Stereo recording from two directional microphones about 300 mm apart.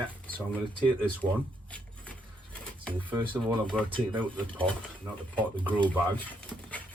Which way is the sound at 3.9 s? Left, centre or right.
Centre.